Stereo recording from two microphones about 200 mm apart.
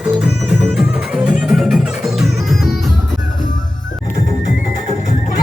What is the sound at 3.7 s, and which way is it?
Music, 40° left (ahead or behind).